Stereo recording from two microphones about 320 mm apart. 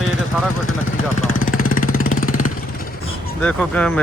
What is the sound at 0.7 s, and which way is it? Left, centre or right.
Vehicle, left.